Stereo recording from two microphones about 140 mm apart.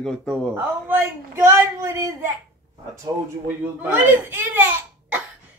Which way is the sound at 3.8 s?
15° right (ahead or behind).